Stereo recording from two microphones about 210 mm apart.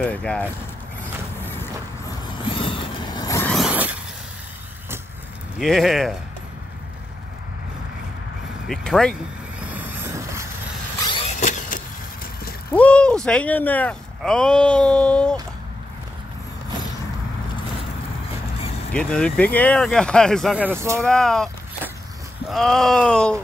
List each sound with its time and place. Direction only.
0.0 s speech: 5° left (ahead or behind)
1.0 s vehicle: 10° left (ahead or behind)
2.2 s vehicle: 25° left (ahead or behind)
3.5 s zipper: 5° right (ahead or behind)
5.6 s speech: centre (ahead or behind)
8.6 s speech: centre (ahead or behind)
9.6 s train: 10° right (ahead or behind)
11.3 s vehicle: 35° left (ahead or behind)
12.7 s speech: 5° left (ahead or behind)
18.6 s vehicle: 30° left (ahead or behind)
18.9 s speech: 5° left (ahead or behind); by 21.1 s 15° right (ahead or behind)
21.1 s a sound: centre (ahead or behind)
22.5 s speech: centre (ahead or behind)